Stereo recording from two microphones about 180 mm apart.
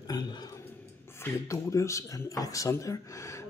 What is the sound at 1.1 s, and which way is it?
Speech, 15° left (ahead or behind).